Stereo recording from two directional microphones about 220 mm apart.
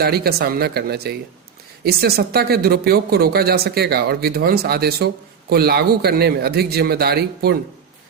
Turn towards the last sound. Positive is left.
turn(degrees=-45)  # may be behind; listen again after turning